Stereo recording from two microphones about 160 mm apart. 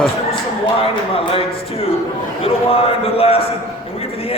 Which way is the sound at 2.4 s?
35° left (ahead or behind).